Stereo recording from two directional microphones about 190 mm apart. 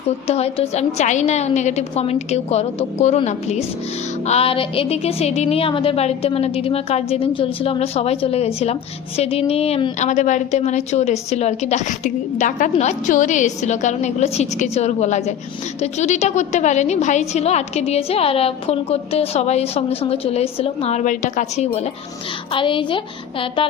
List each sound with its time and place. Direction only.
0.3 s a woman's voice: 35° left (ahead or behind)